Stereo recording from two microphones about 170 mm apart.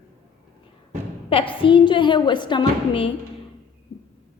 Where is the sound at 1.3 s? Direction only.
30° left (ahead or behind).